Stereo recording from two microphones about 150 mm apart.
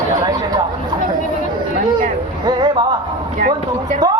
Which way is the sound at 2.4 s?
30° right (ahead or behind).